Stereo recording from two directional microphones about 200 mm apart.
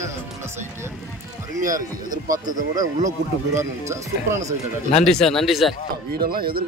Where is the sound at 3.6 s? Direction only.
15° right (ahead or behind).